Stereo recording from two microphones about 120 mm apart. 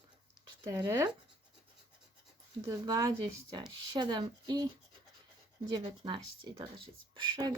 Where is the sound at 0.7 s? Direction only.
25° right (ahead or behind).